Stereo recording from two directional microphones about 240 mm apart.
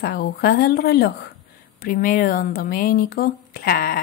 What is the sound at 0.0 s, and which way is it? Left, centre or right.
A woman's voice, left.